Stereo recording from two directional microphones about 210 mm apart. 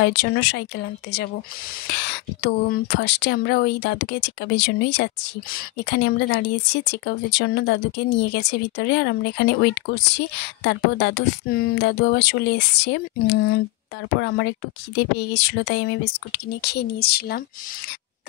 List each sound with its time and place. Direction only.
0.0 s speech: 55° left (ahead or behind)